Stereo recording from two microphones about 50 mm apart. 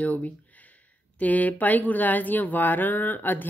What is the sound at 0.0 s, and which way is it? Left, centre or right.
A woman's voice, left.